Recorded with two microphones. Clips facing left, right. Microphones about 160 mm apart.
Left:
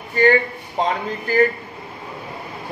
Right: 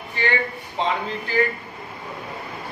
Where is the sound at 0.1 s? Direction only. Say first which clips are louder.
Left 9 dB; 45° left (ahead or behind).